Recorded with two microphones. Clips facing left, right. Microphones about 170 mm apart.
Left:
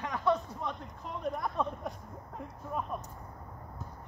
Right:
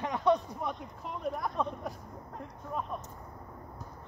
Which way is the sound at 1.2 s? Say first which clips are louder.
Even; centre (ahead or behind).